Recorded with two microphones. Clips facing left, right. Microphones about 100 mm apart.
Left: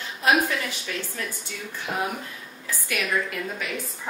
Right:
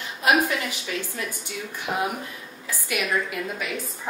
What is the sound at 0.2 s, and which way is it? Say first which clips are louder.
A woman's voice: right 1 dB; 15° right (ahead or behind).